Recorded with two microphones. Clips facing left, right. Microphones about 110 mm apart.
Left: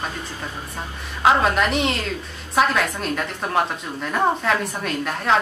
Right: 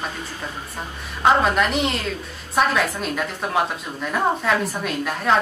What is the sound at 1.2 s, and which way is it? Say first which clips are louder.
A woman's voice: even; centre (ahead or behind).